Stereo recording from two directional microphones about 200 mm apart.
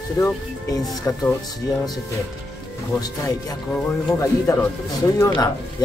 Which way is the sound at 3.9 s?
10° left (ahead or behind).